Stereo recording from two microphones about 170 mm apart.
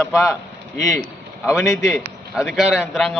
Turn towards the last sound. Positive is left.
turn(degrees=0)  # may be behind; listen again after turning